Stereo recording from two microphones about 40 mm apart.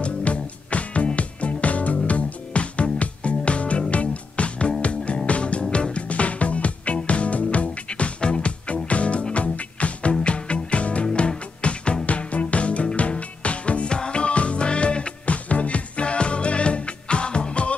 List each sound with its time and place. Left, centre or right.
0.0 s music: left